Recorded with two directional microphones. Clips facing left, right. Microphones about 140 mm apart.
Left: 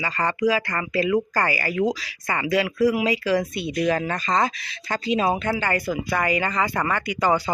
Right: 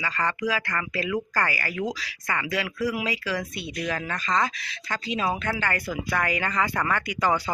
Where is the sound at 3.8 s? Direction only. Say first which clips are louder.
Left 7 dB; 35° left (ahead or behind).